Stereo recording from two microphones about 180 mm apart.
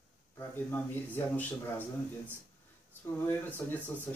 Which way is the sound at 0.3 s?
10° left (ahead or behind).